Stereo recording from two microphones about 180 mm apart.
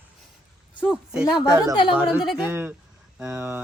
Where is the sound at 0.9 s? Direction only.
5° right (ahead or behind).